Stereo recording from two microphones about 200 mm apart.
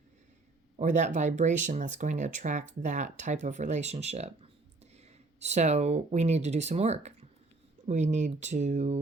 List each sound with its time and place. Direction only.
0.8 s speech: 35° right (ahead or behind)
5.4 s speech: 35° right (ahead or behind)